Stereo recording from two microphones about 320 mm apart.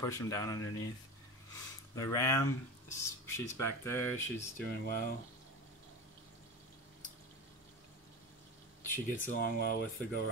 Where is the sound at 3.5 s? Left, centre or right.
Left.